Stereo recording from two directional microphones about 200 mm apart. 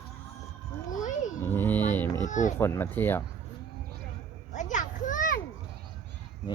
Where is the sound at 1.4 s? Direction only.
10° left (ahead or behind).